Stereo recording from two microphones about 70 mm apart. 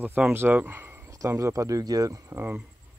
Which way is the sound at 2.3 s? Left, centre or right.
Right.